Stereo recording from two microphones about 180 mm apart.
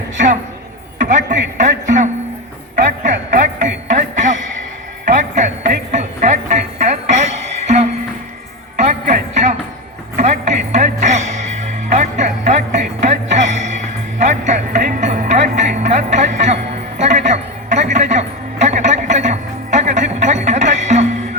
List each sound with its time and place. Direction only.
0.9 s a sound: 45° right (ahead or behind)
1.5 s music: 45° right (ahead or behind)
3.0 s music: 45° right (ahead or behind)
8.8 s music: 40° right (ahead or behind)